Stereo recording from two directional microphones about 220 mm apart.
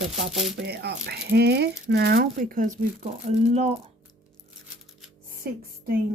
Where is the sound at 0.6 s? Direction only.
50° right (ahead or behind).